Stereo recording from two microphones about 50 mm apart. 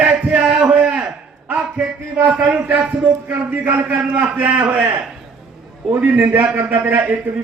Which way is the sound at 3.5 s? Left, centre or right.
Right.